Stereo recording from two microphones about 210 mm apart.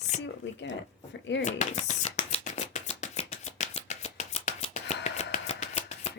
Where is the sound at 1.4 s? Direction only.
35° left (ahead or behind).